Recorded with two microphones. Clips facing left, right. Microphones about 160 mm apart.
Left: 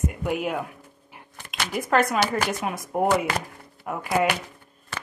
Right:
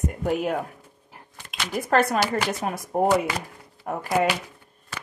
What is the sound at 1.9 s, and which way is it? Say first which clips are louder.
Speech: right 1 dB; 35° right (ahead or behind).